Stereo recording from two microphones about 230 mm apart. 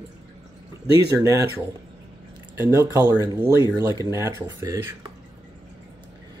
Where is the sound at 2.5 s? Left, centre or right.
Centre.